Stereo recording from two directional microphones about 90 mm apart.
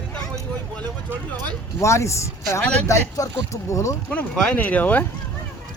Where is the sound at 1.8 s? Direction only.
35° left (ahead or behind).